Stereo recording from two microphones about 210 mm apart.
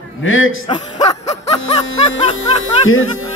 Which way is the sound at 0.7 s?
20° left (ahead or behind).